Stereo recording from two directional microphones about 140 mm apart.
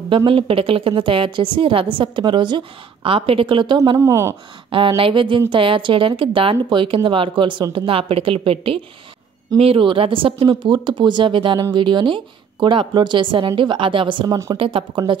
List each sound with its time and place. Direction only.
0.1 s a woman's voice: 40° right (ahead or behind); by 4.4 s 20° right (ahead or behind)
4.6 s a woman's voice: 40° right (ahead or behind)